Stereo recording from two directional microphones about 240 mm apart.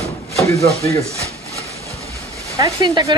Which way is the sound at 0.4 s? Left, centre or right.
Centre.